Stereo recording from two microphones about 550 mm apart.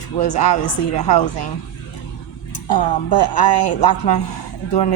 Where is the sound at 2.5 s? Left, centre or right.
Left.